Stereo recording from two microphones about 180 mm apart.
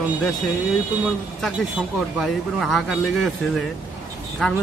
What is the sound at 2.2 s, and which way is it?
Speech, centre (ahead or behind).